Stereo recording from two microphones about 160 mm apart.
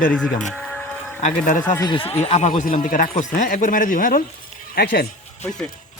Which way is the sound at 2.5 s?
55° left (ahead or behind).